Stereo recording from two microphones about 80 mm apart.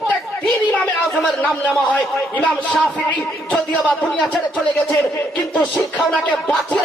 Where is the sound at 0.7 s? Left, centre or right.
Centre.